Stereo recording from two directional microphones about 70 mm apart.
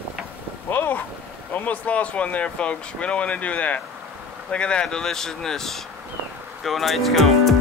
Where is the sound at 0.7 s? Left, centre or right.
Left.